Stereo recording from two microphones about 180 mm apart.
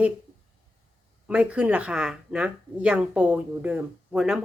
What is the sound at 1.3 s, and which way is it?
Speech, 5° right (ahead or behind).